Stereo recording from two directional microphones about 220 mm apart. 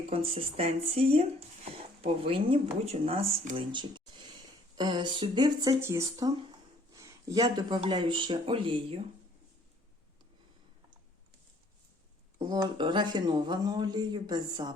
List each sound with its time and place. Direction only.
0.1 s speech: 25° right (ahead or behind)
12.5 s speech: 20° right (ahead or behind)